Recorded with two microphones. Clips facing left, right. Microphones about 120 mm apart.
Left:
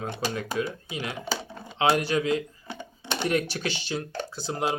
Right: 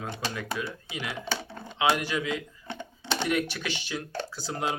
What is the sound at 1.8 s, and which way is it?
Speech, 30° left (ahead or behind).